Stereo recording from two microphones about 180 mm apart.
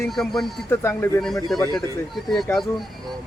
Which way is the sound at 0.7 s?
15° left (ahead or behind).